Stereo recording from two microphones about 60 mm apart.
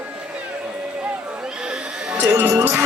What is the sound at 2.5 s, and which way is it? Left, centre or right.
Music, right.